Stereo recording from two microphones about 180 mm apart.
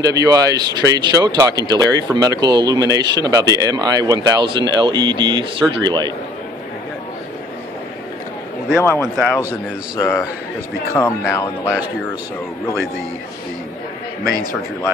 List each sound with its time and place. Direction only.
0.0 s speech: 20° right (ahead or behind)
8.8 s speech: 10° left (ahead or behind)
14.2 s speech: 20° right (ahead or behind)